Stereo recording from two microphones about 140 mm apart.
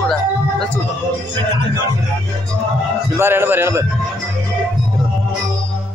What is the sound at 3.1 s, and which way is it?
Speech, 15° right (ahead or behind).